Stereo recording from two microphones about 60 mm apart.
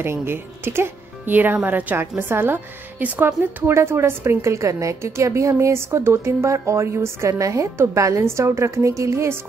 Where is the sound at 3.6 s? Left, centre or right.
Right.